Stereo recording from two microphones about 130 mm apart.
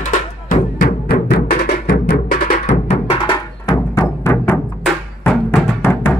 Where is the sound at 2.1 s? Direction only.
90° left.